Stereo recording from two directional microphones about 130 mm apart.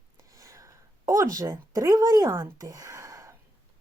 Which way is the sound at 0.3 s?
25° right (ahead or behind).